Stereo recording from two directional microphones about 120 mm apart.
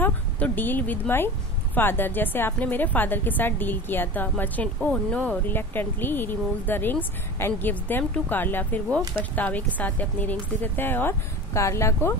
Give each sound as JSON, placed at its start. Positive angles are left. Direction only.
{"t": 0.0, "sound": "speech", "side_deg": 15}